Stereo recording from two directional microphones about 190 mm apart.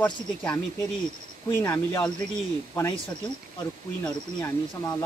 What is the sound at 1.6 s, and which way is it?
Speech, 10° left (ahead or behind).